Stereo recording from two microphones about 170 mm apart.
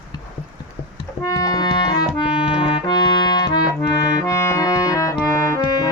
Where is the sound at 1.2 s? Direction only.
20° left (ahead or behind).